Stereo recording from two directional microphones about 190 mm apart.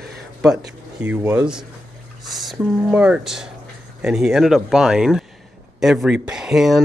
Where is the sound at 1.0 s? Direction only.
10° right (ahead or behind).